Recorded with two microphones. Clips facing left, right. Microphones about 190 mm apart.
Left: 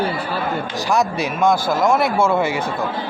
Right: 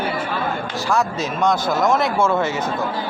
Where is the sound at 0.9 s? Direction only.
15° left (ahead or behind).